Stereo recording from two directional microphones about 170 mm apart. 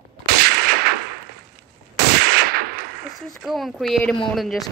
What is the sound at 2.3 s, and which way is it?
Gunshot, 65° right (ahead or behind).